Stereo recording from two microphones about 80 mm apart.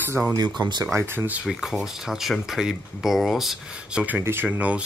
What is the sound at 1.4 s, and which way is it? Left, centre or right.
Speech, centre.